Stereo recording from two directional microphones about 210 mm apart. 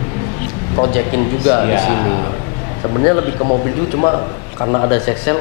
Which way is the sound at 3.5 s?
30° left (ahead or behind).